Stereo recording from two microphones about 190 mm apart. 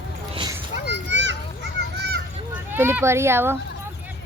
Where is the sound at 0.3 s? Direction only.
20° right (ahead or behind).